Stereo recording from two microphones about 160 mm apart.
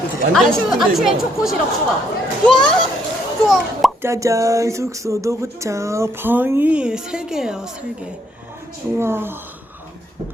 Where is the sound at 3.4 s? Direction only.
Centre (ahead or behind).